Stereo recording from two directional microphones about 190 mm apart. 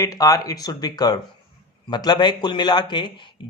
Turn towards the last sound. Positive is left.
turn(degrees=25)  # may be behind; listen again after turning